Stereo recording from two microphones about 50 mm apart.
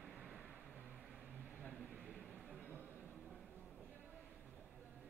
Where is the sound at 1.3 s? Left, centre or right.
Right.